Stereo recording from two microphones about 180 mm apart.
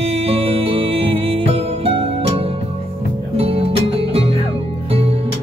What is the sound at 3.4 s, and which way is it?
Music, 30° right (ahead or behind).